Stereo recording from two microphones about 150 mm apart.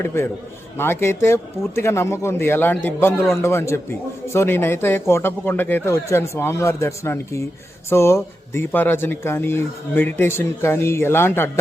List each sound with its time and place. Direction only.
0.0 s speech: 15° left (ahead or behind)